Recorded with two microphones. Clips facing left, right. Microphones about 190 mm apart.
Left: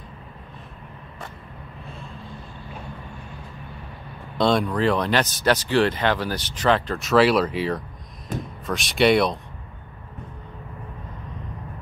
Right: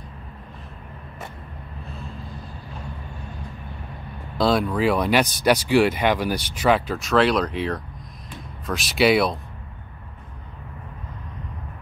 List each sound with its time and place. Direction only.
4.4 s speech: centre (ahead or behind)
8.3 s speech: 45° left (ahead or behind)
8.6 s speech: centre (ahead or behind)